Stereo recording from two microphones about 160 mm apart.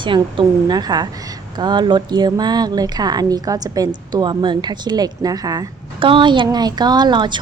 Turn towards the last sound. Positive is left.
turn(degrees=-30)  # may be behind; listen again after turning